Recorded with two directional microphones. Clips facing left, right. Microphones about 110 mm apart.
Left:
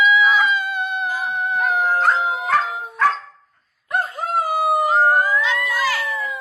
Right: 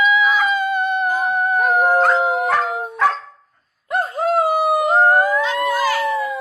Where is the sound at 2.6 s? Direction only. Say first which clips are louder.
Right 5 dB; 55° right (ahead or behind).